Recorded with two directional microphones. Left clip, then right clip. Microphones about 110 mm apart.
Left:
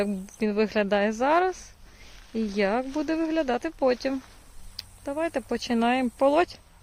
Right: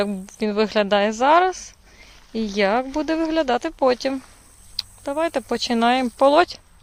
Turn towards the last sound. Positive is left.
turn(degrees=-15)  # may be behind; listen again after turning